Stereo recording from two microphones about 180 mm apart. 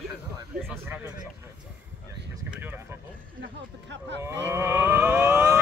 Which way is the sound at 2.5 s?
10° right (ahead or behind).